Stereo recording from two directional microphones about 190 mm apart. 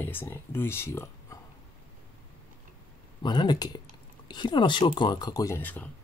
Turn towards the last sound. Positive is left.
turn(degrees=10)  # may be behind; listen again after turning